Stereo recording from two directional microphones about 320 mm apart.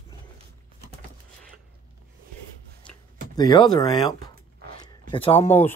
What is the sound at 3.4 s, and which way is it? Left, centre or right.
Speech, centre.